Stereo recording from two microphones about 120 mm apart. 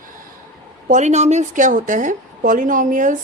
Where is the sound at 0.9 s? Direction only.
75° right (ahead or behind); by 3.1 s 90° right.